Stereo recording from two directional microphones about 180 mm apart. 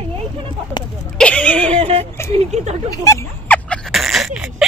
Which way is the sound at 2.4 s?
40° right (ahead or behind).